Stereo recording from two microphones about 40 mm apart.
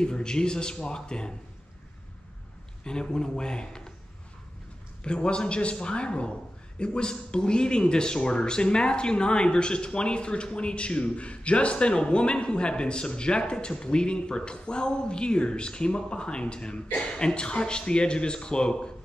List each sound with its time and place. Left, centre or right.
0.0 s speech: centre
2.8 s speech: centre
5.0 s speech: left